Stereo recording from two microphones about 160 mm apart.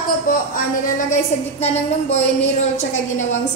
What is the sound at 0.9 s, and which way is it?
A woman's voice, 45° left (ahead or behind).